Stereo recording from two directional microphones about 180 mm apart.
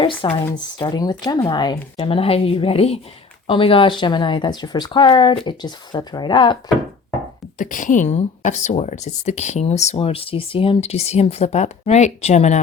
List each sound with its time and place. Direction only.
0.5 s speech: 25° left (ahead or behind)
7.6 s speech: 45° left (ahead or behind)